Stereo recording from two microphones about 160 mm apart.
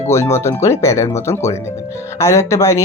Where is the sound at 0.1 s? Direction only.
15° left (ahead or behind).